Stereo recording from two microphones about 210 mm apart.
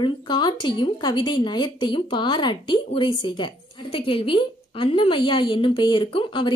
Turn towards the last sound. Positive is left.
turn(degrees=25)  # may be behind; listen again after turning